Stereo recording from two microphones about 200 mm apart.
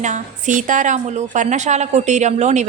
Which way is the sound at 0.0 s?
40° right (ahead or behind).